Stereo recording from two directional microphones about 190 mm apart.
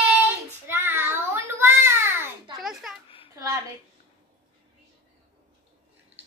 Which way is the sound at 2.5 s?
Centre (ahead or behind).